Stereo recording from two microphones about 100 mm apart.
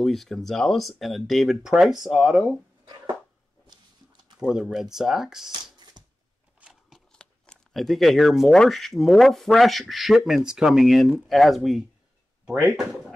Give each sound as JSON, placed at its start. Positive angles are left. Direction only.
{"t": 0.0, "sound": "speech", "side_deg": 0}
{"t": 4.4, "sound": "speech", "side_deg": -5}
{"t": 5.5, "sound": "shuffling cards", "side_deg": -45}
{"t": 6.6, "sound": "a sound", "side_deg": 0}
{"t": 7.1, "sound": "speech", "side_deg": 10}